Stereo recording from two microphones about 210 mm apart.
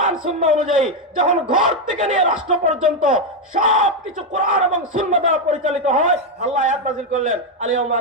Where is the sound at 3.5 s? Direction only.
40° right (ahead or behind).